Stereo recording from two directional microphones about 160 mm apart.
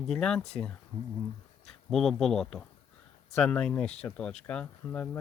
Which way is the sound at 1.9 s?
Centre (ahead or behind).